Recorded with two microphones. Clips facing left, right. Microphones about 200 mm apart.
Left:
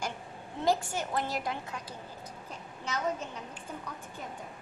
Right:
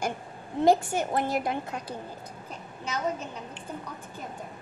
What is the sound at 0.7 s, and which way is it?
A woman's voice, 55° right (ahead or behind).